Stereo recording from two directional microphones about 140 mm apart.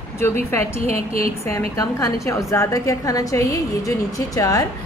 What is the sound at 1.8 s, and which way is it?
A woman's voice, 25° left (ahead or behind).